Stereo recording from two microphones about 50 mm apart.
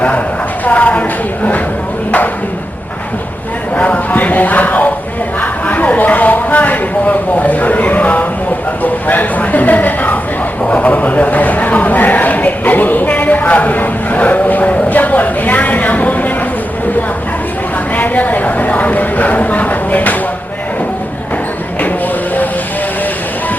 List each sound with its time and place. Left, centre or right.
0.6 s a woman's voice: left
3.8 s a sound: left
4.1 s speech: left
17.9 s speech: left